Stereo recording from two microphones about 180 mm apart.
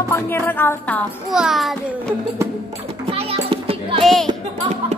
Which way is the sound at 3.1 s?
35° right (ahead or behind).